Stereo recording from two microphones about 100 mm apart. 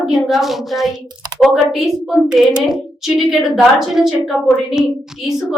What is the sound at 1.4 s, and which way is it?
A woman's voice, 5° right (ahead or behind).